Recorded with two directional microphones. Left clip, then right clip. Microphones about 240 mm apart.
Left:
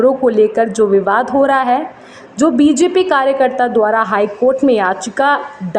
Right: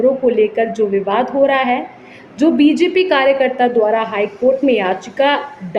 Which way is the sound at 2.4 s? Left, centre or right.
Centre.